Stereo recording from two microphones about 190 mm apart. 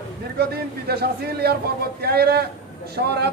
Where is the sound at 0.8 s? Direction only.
55° right (ahead or behind).